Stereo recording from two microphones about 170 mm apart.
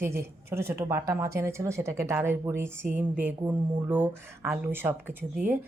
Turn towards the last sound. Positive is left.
turn(degrees=-10)  # may be behind; listen again after turning